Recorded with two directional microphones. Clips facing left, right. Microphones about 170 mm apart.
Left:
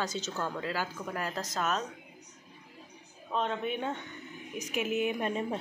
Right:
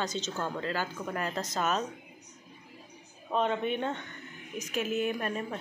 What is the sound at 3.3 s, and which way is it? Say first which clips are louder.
Speech: right 3 dB; 5° right (ahead or behind).